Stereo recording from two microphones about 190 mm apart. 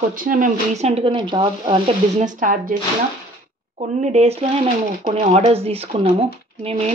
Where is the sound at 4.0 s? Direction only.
35° right (ahead or behind).